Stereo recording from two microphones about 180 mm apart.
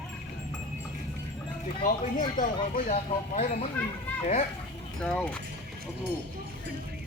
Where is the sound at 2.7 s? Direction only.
40° left (ahead or behind).